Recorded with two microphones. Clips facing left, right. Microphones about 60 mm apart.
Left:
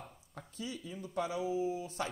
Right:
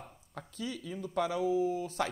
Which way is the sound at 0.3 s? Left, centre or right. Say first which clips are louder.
Right 4 dB; right.